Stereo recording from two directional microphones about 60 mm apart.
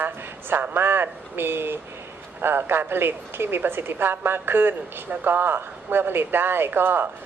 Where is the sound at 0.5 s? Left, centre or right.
Right.